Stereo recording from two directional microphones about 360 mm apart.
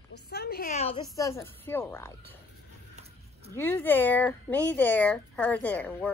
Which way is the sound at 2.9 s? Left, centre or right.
Centre.